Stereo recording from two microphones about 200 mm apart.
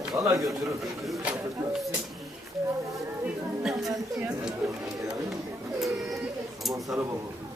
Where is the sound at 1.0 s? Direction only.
Centre (ahead or behind).